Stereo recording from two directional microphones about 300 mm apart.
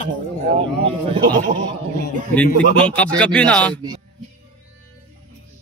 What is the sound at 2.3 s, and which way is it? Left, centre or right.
Speech, centre.